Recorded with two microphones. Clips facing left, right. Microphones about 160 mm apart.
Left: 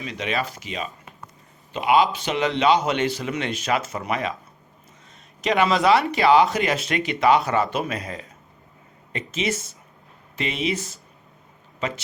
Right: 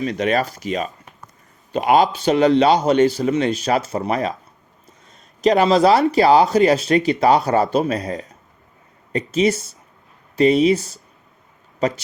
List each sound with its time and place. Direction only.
0.0 s speech: 45° right (ahead or behind)
5.4 s speech: 35° right (ahead or behind)